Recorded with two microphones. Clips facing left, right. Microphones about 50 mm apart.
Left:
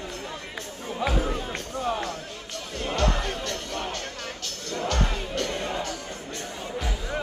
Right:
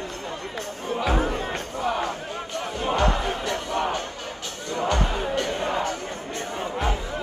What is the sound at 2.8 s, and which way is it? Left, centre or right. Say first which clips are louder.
Music: right 3 dB; centre.